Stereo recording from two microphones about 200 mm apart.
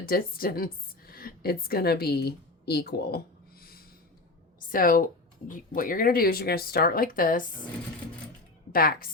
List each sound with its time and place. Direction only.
0.0 s a woman's voice: 45° left (ahead or behind)
3.6 s a sound: 50° left (ahead or behind)
4.7 s speech: 45° left (ahead or behind)
8.7 s speech: 45° left (ahead or behind)